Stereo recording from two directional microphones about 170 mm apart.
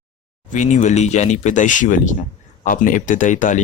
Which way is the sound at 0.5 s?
45° left (ahead or behind).